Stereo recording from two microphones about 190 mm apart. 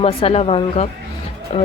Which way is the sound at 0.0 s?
30° left (ahead or behind).